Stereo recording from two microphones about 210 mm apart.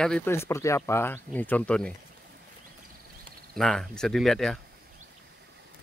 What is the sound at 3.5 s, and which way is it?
Speech, centre (ahead or behind).